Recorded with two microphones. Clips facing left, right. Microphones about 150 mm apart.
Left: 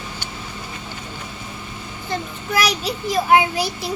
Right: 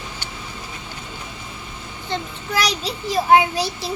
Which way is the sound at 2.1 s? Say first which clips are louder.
Left 1 dB; 30° right (ahead or behind).